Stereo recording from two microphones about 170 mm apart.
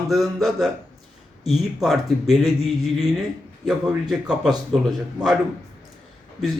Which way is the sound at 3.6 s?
5° right (ahead or behind).